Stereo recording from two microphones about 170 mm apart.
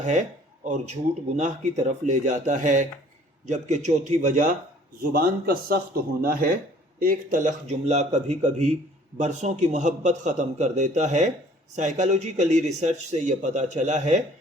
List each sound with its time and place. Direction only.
0.0 s speech: 45° right (ahead or behind)
5.1 s a man's voice: 65° right (ahead or behind); by 14.2 s 45° right (ahead or behind)